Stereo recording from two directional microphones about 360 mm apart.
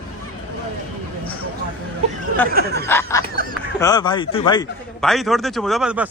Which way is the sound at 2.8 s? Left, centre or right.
Centre.